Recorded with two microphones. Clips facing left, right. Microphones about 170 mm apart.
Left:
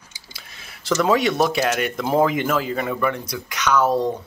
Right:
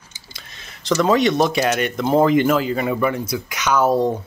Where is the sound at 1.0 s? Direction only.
5° left (ahead or behind).